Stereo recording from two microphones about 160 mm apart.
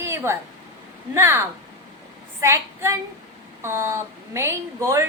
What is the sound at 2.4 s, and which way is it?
Female singing, 15° right (ahead or behind).